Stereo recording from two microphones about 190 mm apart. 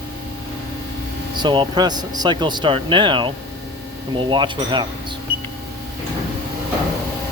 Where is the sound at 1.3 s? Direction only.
25° right (ahead or behind).